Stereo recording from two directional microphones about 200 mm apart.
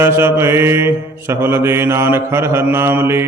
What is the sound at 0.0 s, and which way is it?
Mantra, 10° right (ahead or behind).